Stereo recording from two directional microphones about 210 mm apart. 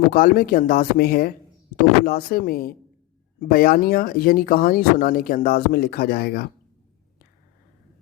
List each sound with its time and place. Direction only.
0.1 s speech: 40° left (ahead or behind)